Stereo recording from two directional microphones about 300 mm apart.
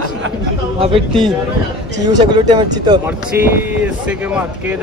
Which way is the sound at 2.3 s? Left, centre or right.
Centre.